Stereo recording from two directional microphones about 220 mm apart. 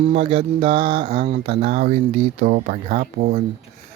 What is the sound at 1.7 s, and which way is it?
Speech, 35° right (ahead or behind).